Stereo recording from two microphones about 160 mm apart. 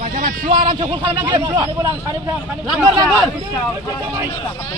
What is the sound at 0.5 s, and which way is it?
Speech, 30° right (ahead or behind).